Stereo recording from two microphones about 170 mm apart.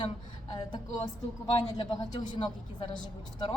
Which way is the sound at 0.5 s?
25° left (ahead or behind).